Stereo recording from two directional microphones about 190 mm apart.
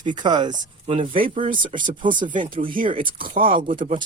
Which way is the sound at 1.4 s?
45° right (ahead or behind).